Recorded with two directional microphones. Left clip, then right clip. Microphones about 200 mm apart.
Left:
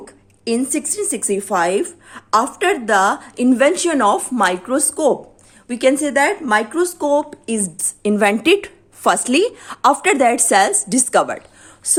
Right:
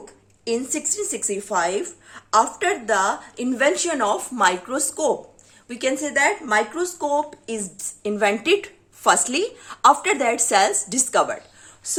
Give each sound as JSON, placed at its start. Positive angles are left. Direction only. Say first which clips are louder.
{"t": 0.0, "sound": "speech", "louder": "left 4 dB", "side_deg": 40}